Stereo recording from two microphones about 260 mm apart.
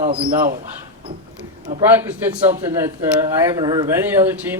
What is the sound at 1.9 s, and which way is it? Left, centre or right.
Speech, centre.